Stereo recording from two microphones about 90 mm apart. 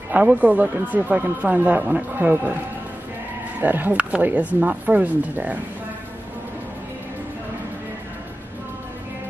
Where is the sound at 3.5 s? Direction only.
20° right (ahead or behind).